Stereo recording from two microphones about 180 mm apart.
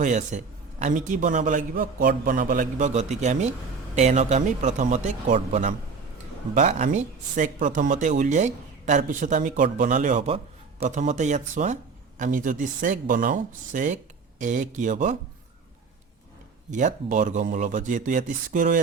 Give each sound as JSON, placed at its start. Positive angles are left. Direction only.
{"t": 0.0, "sound": "a man's voice", "side_deg": -40}
{"t": 16.7, "sound": "a man's voice", "side_deg": -45}